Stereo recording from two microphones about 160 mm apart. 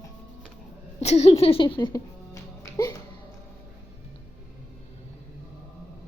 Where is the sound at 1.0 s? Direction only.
40° left (ahead or behind); by 3.0 s 20° left (ahead or behind).